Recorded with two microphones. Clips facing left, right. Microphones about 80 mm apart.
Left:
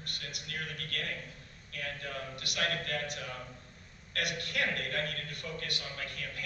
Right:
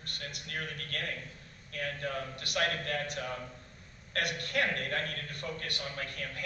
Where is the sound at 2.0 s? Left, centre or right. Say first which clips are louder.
Right 4 dB; right.